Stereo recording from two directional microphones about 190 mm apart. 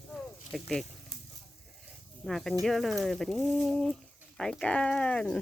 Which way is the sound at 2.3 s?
Centre (ahead or behind).